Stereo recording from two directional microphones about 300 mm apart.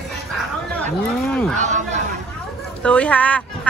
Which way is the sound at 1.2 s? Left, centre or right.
Centre.